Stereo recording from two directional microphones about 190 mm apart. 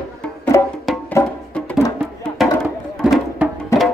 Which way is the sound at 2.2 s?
Centre (ahead or behind).